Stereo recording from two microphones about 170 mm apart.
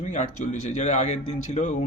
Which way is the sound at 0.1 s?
45° left (ahead or behind).